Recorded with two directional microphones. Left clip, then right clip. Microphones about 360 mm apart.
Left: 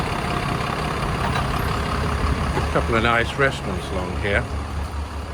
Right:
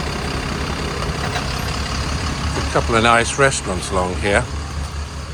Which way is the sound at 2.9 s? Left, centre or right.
Centre.